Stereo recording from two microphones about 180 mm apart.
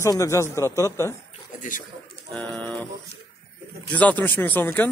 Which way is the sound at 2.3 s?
5° left (ahead or behind).